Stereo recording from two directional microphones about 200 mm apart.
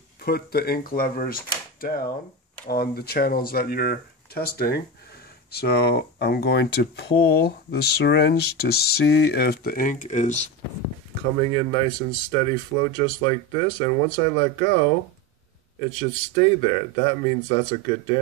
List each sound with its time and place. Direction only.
0.2 s speech: 50° left (ahead or behind)
11.5 s speech: 25° left (ahead or behind)
16.0 s speech: 25° left (ahead or behind)